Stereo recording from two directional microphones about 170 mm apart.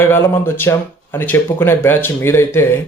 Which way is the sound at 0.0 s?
15° left (ahead or behind).